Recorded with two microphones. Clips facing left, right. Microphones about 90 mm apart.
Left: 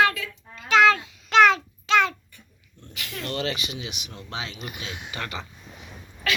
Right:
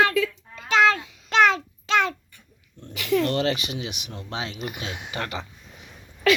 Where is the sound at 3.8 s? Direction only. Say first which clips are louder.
Right 3 dB; 35° right (ahead or behind).